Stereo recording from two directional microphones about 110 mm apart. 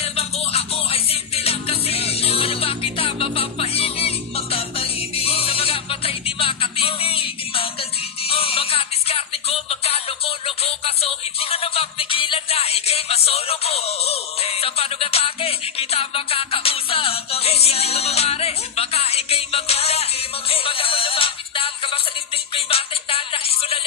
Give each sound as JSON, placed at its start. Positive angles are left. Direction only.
{"t": 0.0, "sound": "music", "side_deg": 65}